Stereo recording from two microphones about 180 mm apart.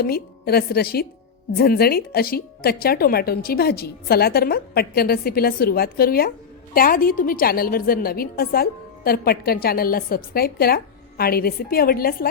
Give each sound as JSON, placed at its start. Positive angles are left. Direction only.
{"t": 0.0, "sound": "speech", "side_deg": 60}